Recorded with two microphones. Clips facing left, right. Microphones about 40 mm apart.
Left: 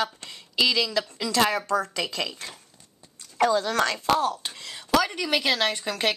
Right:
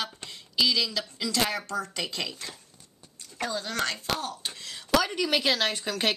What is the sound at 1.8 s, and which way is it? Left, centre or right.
Speech, left.